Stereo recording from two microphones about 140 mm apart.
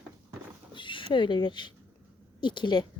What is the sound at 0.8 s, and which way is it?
A woman's voice, 35° left (ahead or behind).